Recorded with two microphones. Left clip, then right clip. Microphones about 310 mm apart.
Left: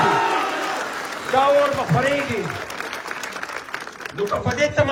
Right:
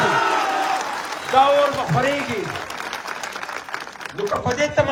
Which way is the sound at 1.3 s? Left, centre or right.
Right.